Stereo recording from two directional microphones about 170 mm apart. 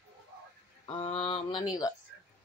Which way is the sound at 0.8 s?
35° left (ahead or behind).